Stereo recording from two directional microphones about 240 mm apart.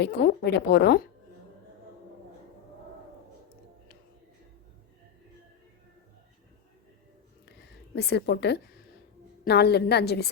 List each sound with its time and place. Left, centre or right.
0.0 s a woman's voice: left
7.9 s a woman's voice: left